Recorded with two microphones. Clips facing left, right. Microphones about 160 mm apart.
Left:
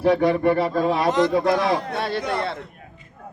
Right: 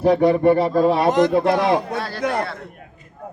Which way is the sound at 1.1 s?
50° right (ahead or behind).